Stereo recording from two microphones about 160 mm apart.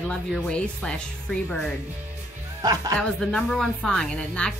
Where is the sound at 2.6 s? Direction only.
25° right (ahead or behind).